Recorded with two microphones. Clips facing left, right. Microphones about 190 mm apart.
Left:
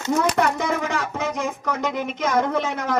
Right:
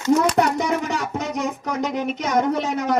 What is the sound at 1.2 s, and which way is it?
Speech, 35° right (ahead or behind).